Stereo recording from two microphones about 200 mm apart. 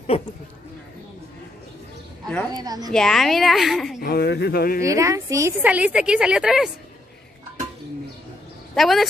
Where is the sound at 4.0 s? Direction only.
50° left (ahead or behind).